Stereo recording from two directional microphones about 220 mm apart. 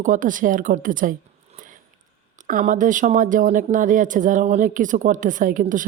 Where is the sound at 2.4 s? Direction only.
35° right (ahead or behind).